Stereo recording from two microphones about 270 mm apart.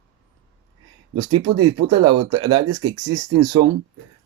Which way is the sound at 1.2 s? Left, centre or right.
Right.